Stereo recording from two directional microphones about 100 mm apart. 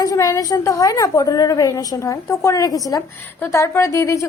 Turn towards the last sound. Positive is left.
turn(degrees=30)  # may be behind; listen again after turning